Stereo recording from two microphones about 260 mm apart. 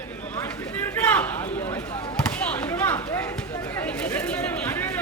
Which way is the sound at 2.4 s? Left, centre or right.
Centre.